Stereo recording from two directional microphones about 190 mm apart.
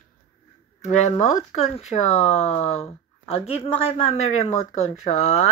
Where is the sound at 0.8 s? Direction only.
35° left (ahead or behind).